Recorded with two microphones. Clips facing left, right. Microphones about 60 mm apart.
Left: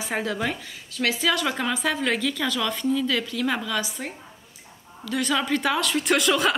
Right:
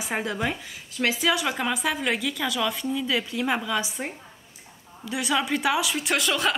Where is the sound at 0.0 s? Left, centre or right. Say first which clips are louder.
Left 1 dB; centre.